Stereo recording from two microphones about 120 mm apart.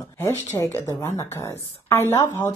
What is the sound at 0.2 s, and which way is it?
A woman's voice, 20° left (ahead or behind).